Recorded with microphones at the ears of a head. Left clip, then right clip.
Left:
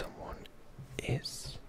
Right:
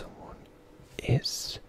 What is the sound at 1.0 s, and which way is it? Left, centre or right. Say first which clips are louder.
Whispering: right 9 dB; right.